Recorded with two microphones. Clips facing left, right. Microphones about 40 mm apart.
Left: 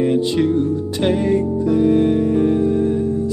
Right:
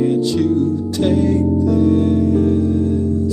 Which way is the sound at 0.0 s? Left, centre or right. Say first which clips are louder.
Right 1 dB; left.